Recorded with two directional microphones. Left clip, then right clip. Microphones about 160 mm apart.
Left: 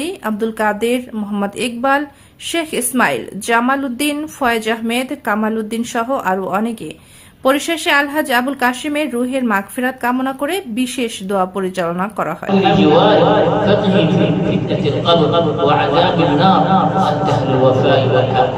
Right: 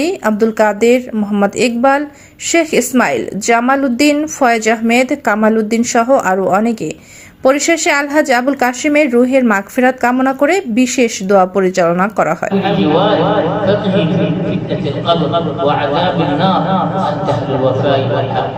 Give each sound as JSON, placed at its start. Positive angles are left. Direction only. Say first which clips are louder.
{"t": 0.0, "sound": "speech", "louder": "right 7 dB", "side_deg": -15}
{"t": 12.6, "sound": "a man's voice", "louder": "left 2 dB", "side_deg": -35}